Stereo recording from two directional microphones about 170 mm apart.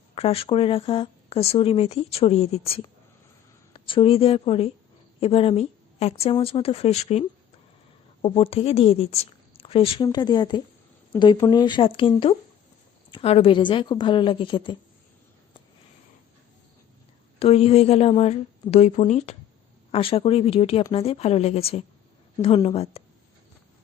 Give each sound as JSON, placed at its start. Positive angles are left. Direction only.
{"t": 0.1, "sound": "a woman's voice", "side_deg": 35}
{"t": 17.4, "sound": "speech", "side_deg": 35}